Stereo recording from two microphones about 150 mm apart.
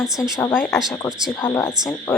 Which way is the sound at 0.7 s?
Centre (ahead or behind).